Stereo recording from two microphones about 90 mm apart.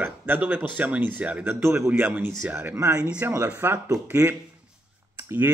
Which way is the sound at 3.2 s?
30° right (ahead or behind).